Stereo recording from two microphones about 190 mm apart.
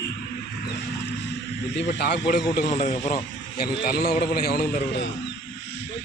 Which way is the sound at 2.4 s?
40° left (ahead or behind).